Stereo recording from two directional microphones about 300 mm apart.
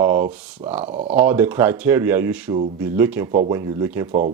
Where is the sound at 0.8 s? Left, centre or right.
Right.